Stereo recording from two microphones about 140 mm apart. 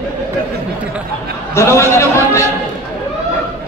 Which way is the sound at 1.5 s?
20° left (ahead or behind).